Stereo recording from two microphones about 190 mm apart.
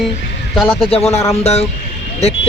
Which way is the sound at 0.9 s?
30° left (ahead or behind).